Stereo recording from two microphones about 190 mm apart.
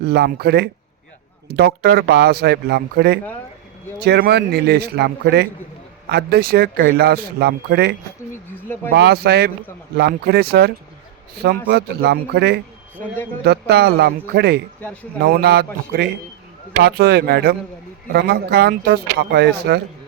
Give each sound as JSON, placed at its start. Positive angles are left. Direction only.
{"t": 0.0, "sound": "speech", "side_deg": -55}
{"t": 8.5, "sound": "speech", "side_deg": 10}
{"t": 8.9, "sound": "speech", "side_deg": -60}